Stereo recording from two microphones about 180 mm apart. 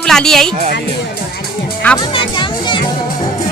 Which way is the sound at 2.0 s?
25° left (ahead or behind).